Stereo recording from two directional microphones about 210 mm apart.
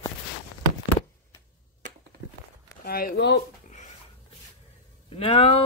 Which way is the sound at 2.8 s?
45° left (ahead or behind).